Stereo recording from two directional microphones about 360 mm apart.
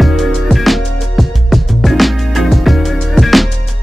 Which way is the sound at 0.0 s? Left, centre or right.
Centre.